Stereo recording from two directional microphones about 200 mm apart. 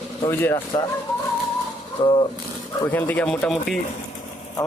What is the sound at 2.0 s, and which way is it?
Speech, 25° left (ahead or behind).